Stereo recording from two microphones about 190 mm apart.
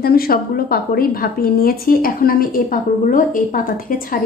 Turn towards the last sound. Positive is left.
turn(degrees=45)  # may be behind; listen again after turning